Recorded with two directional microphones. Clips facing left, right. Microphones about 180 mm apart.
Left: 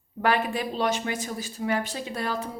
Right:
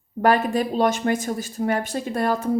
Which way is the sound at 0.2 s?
45° right (ahead or behind).